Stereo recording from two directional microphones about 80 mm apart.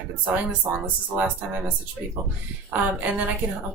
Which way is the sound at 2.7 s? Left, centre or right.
Right.